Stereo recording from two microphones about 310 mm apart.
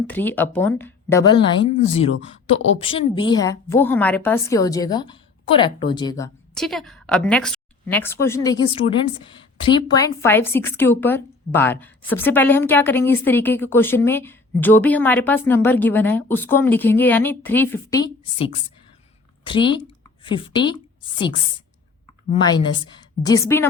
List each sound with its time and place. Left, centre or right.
0.1 s a woman's voice: centre
2.1 s speech: left
2.7 s a woman's voice: centre